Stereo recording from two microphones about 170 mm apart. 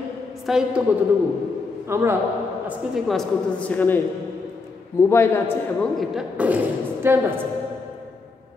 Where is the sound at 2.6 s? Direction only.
Centre (ahead or behind).